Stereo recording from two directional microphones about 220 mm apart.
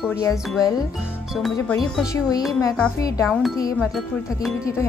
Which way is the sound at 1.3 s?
Centre (ahead or behind).